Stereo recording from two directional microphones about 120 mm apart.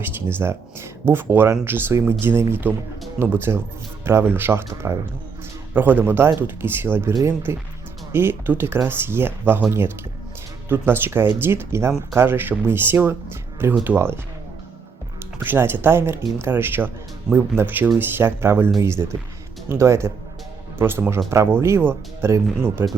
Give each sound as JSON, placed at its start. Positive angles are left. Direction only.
{"t": 0.0, "sound": "speech", "side_deg": -20}
{"t": 15.4, "sound": "speech", "side_deg": -20}